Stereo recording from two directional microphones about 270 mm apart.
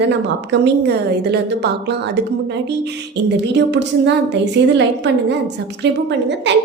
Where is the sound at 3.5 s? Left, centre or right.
Right.